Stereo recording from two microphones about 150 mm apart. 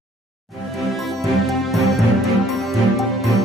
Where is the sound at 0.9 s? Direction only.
Centre (ahead or behind).